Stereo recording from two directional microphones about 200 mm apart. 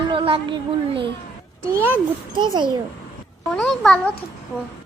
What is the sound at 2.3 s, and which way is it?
Speech, 25° right (ahead or behind).